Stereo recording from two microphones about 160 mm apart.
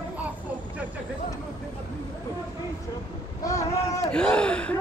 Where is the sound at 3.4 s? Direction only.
20° left (ahead or behind).